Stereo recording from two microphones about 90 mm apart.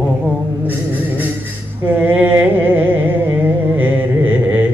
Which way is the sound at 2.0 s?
20° right (ahead or behind).